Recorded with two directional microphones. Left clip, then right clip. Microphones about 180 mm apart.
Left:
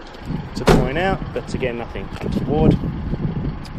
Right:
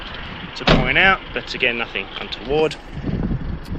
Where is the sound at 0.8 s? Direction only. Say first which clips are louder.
Right 6 dB; 25° left (ahead or behind).